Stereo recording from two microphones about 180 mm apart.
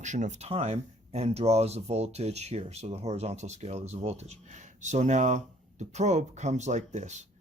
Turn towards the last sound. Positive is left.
turn(degrees=-40)  # may be behind; listen again after turning